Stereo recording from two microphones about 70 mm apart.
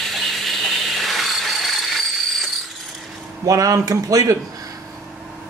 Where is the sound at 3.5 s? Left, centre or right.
Right.